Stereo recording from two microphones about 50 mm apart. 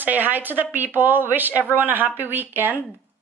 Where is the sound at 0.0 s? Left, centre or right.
Right.